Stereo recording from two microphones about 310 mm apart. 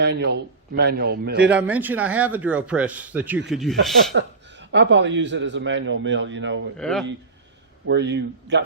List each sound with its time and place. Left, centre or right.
0.0 s a man's voice: right
1.5 s speech: centre
4.1 s a man's voice: right
6.7 s speech: centre
7.9 s a man's voice: right